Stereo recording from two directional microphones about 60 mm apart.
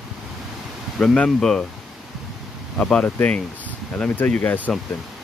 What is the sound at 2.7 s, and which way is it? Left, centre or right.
Speech, centre.